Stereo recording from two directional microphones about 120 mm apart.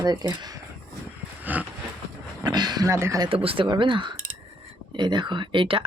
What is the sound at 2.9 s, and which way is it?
Speech, 25° right (ahead or behind).